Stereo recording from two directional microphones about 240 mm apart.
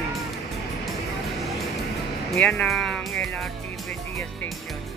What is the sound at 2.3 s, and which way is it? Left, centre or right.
Speech, centre.